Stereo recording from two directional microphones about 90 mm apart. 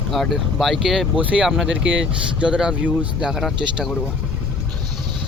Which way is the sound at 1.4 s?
5° right (ahead or behind).